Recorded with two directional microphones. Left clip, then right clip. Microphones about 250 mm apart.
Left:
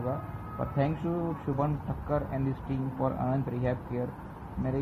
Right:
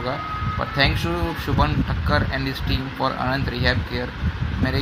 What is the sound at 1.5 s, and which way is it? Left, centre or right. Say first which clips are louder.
Speech: right 10 dB; right.